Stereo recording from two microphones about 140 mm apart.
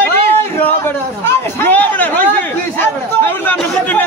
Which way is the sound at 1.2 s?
15° left (ahead or behind).